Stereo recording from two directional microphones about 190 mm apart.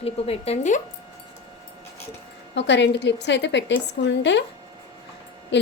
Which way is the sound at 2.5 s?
65° left (ahead or behind).